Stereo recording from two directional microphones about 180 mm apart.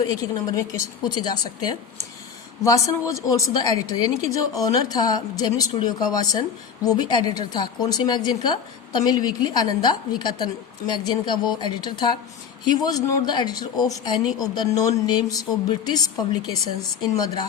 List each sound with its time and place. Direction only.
0.2 s speech: 20° left (ahead or behind)
3.1 s speech: 20° left (ahead or behind)